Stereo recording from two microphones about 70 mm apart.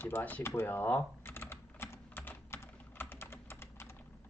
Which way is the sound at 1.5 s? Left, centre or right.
Left.